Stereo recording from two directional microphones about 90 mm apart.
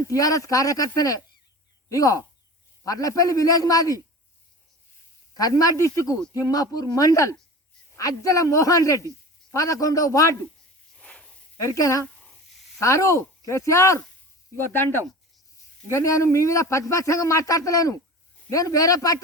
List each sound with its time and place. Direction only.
0.1 s a man's voice: 40° left (ahead or behind)
5.4 s a man's voice: 40° left (ahead or behind)
10.9 s a sound: 10° left (ahead or behind)
11.6 s a man's voice: 35° left (ahead or behind)
12.1 s a sound: 10° left (ahead or behind)
12.8 s a man's voice: 35° left (ahead or behind)